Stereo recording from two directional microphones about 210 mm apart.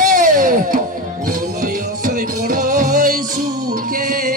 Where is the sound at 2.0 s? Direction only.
40° right (ahead or behind).